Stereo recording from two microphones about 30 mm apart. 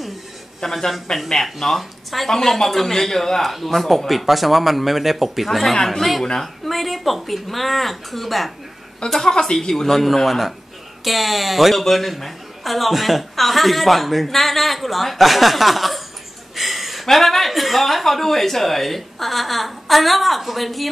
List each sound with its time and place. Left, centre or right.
0.6 s a man's voice: centre
9.3 s speech: centre
9.8 s a woman's voice: centre